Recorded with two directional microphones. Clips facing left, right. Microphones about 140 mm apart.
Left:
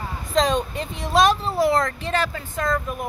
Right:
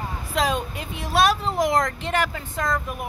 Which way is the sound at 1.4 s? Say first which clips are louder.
Left 2 dB; 15° right (ahead or behind).